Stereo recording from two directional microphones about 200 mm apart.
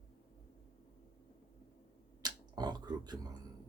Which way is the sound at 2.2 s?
20° right (ahead or behind).